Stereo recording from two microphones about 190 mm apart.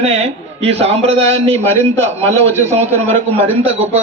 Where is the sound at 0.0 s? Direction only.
35° right (ahead or behind).